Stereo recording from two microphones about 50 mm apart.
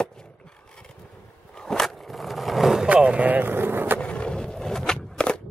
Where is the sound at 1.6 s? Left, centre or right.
Centre.